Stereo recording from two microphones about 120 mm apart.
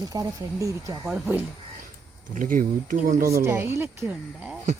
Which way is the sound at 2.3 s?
90° right.